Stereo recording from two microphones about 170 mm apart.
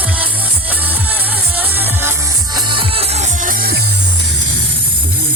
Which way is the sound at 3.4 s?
60° right (ahead or behind).